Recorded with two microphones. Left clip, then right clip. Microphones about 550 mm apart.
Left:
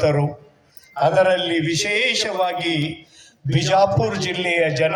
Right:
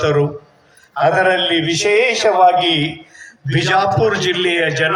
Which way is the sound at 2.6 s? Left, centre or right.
Left.